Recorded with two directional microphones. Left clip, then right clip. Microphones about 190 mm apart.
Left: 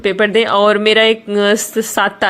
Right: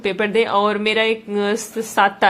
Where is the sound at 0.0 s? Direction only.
20° left (ahead or behind).